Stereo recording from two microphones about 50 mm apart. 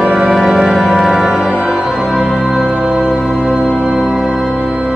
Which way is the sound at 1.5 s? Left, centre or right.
Right.